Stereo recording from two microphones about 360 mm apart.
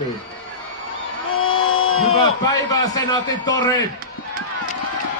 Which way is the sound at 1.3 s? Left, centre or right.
Left.